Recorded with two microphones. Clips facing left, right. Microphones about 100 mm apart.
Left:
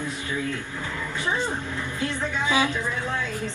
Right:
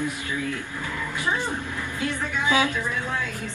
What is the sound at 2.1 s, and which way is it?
Music, 20° left (ahead or behind).